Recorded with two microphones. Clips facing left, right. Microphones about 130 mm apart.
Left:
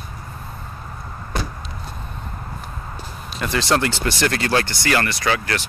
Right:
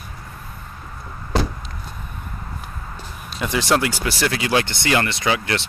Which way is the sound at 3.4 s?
15° right (ahead or behind).